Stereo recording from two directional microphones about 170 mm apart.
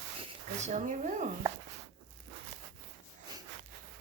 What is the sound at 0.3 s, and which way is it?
Speech, 40° right (ahead or behind).